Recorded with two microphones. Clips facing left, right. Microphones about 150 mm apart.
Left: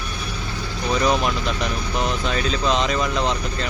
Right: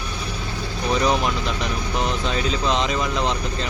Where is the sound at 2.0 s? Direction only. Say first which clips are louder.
Left 1 dB; 20° right (ahead or behind).